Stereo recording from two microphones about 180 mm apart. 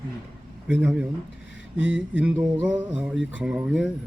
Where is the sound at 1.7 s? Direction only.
75° left (ahead or behind).